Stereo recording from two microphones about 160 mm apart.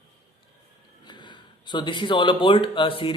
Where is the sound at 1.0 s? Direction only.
30° left (ahead or behind).